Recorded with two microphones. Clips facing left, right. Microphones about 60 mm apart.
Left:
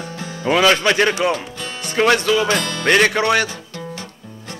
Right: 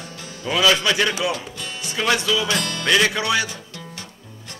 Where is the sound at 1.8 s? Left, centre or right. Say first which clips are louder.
Left 6 dB; left.